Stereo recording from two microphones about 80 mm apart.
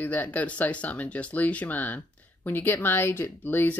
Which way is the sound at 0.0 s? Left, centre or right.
Left.